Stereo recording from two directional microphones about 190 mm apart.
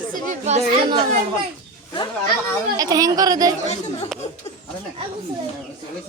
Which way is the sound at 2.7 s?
20° right (ahead or behind).